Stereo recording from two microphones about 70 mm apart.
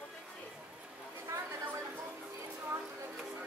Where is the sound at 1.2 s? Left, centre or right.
Right.